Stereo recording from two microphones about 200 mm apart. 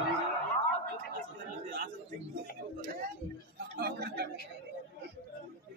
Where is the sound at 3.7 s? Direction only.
50° right (ahead or behind).